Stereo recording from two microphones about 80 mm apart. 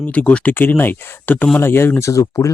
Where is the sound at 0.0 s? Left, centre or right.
Centre.